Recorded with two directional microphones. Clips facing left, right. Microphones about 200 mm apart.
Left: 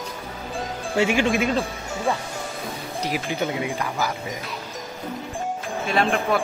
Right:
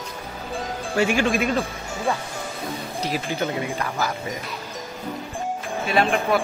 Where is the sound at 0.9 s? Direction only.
20° left (ahead or behind).